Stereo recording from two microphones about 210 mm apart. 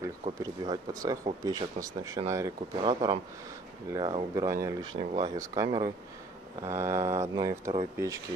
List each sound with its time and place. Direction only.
0.4 s speech: 15° right (ahead or behind)